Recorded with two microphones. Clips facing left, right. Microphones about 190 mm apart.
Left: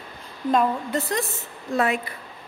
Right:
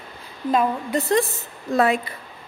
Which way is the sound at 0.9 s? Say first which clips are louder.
Right 8 dB; 25° right (ahead or behind).